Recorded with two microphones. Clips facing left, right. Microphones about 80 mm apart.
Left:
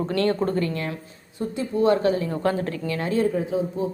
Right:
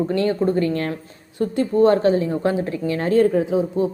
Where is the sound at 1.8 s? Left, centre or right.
Right.